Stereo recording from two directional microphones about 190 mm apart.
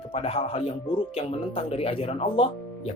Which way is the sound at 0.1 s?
30° left (ahead or behind).